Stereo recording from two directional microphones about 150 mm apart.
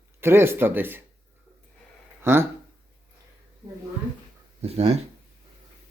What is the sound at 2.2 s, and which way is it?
Speech, 15° right (ahead or behind).